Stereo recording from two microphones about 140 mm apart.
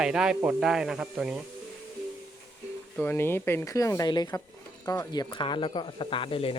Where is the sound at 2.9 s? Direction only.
15° left (ahead or behind); by 6.5 s 40° left (ahead or behind).